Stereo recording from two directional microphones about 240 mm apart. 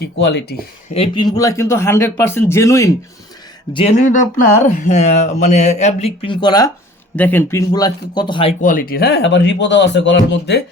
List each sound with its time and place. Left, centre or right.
0.0 s speech: left
0.9 s speech: left
3.7 s speech: left
8.6 s speech: left